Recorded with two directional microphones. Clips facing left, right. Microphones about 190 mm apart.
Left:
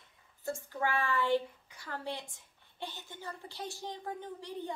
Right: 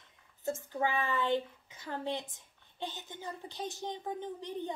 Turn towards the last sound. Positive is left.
turn(degrees=-20)  # may be behind; listen again after turning